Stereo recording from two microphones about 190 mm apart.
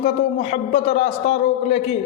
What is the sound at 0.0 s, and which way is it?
A man's voice, 35° left (ahead or behind).